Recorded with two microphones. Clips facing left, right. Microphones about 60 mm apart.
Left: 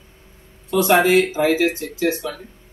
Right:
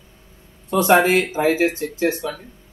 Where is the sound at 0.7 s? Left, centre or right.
Right.